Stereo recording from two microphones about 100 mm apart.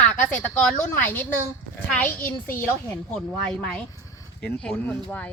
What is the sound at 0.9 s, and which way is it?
A child's voice, 15° left (ahead or behind).